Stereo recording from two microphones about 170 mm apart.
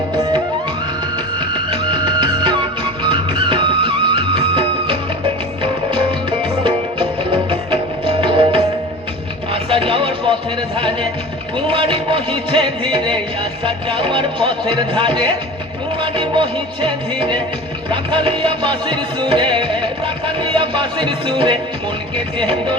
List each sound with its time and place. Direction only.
1.4 s music: 30° right (ahead or behind)
6.4 s music: 30° right (ahead or behind)
11.5 s music: 30° right (ahead or behind)